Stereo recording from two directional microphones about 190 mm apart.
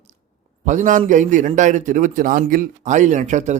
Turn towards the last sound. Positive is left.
turn(degrees=-40)  # may be behind; listen again after turning